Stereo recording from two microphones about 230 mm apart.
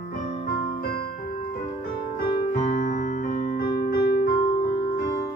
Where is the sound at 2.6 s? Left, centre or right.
Left.